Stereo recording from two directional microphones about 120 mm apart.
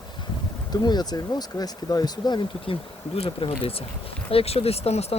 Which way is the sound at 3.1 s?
55° left (ahead or behind).